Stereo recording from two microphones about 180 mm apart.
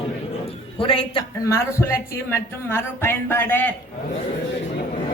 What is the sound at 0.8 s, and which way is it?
Speech, 30° left (ahead or behind).